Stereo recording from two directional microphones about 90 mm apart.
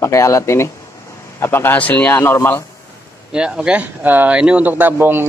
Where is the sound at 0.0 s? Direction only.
35° left (ahead or behind).